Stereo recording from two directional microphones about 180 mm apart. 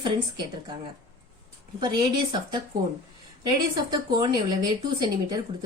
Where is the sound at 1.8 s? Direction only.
25° right (ahead or behind).